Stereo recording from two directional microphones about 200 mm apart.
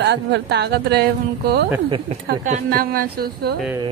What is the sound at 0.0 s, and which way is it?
Speech, 55° right (ahead or behind).